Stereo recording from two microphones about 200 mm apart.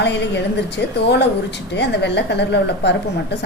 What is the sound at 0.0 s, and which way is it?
Speech, 60° left (ahead or behind).